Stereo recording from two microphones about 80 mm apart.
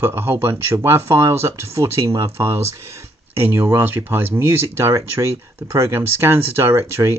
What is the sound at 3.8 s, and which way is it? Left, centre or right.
Speech, right.